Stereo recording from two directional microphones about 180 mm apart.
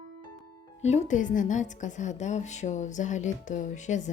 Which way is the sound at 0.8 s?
40° left (ahead or behind).